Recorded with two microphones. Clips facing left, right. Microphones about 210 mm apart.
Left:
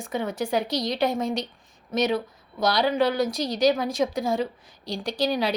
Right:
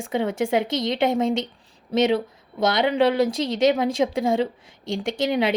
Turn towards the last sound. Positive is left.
turn(degrees=-20)  # may be behind; listen again after turning